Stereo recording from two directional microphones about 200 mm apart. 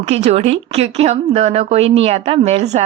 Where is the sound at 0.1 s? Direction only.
35° right (ahead or behind).